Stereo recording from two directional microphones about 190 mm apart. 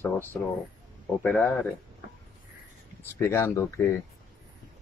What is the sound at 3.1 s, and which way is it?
Speech, 15° left (ahead or behind).